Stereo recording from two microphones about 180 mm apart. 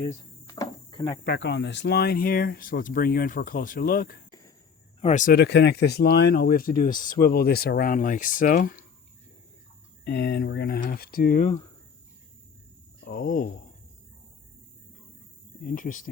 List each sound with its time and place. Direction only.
0.4 s cricket: 20° left (ahead or behind)
1.2 s speech: 65° left (ahead or behind)
4.9 s speech: 40° left (ahead or behind)
7.2 s speech: 60° left (ahead or behind)
10.0 s speech: 65° left (ahead or behind)
13.1 s speech: 55° left (ahead or behind)
15.6 s speech: 45° left (ahead or behind)